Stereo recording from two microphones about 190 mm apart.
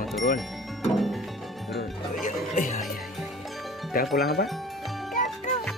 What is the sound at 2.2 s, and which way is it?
Music, 45° left (ahead or behind).